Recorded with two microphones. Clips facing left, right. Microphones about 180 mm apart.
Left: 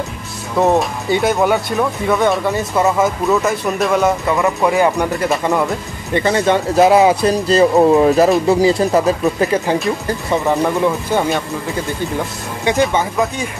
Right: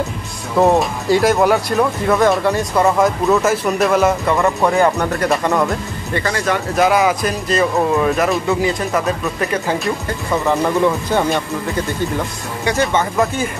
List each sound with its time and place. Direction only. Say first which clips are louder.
0.6 s speech: right 1 dB; centre (ahead or behind)
6.1 s speech: left 5 dB; 25° left (ahead or behind)
10.3 s speech: left 1 dB; 15° left (ahead or behind)
11.1 s speech: even; centre (ahead or behind)